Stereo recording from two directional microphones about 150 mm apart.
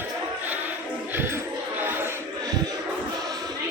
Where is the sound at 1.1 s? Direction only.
15° right (ahead or behind).